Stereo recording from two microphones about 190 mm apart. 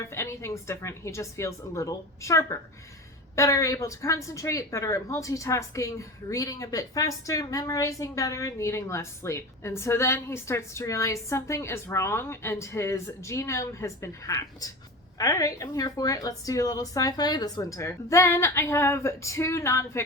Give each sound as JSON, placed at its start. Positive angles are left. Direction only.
{"t": 0.0, "sound": "a woman's voice", "side_deg": 15}